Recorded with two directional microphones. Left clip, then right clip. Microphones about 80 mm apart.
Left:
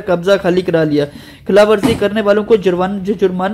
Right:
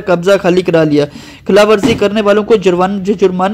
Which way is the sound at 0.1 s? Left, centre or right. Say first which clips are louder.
Right 3 dB; right.